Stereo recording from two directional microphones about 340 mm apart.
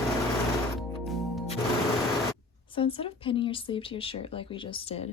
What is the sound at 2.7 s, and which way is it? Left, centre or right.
Speech, centre.